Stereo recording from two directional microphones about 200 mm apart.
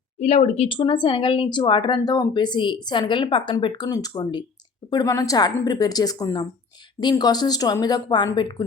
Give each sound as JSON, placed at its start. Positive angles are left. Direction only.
{"t": 0.2, "sound": "speech", "side_deg": 30}